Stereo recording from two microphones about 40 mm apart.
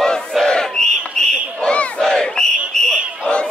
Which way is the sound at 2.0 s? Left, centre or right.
Centre.